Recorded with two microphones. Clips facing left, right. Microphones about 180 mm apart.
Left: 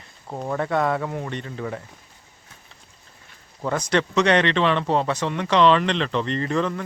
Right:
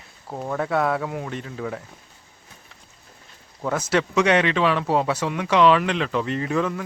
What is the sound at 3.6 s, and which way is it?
Speech, 5° right (ahead or behind).